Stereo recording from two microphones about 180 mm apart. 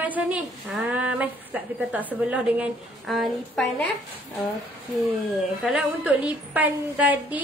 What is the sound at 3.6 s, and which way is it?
Speech, 75° left (ahead or behind).